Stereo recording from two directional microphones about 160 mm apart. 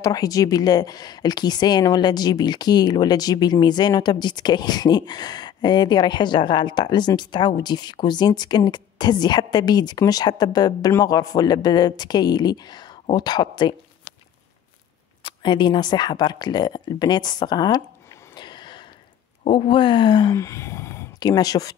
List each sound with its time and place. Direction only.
0.0 s speech: 20° left (ahead or behind)
15.2 s speech: 30° left (ahead or behind)
18.3 s a sound: 30° left (ahead or behind)
19.4 s speech: 35° left (ahead or behind)